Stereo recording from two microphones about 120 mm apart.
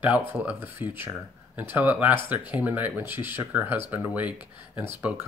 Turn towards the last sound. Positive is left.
turn(degrees=-15)  # may be behind; listen again after turning